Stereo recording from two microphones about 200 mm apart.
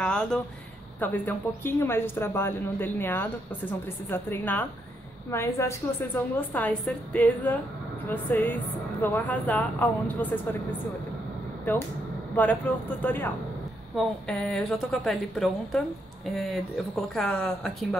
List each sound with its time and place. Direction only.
0.0 s a sound: 5° left (ahead or behind)
0.9 s speech: 10° left (ahead or behind)
12.4 s a woman's voice: 10° left (ahead or behind)